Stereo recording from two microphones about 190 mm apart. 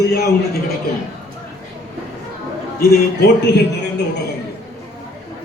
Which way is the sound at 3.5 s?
65° left (ahead or behind).